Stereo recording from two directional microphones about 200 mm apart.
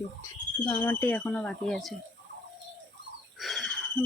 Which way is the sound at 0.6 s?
10° left (ahead or behind).